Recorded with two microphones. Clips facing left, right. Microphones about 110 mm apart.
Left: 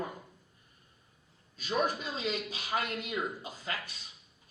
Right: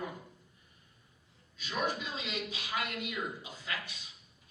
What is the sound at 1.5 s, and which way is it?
A man's voice, 35° left (ahead or behind).